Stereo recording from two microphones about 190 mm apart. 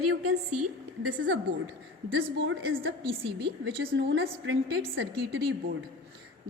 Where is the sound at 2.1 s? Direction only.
80° right.